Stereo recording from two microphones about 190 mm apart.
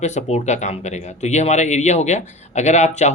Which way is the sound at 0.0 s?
40° left (ahead or behind).